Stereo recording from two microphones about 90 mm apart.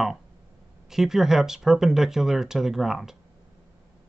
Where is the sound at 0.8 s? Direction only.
5° right (ahead or behind).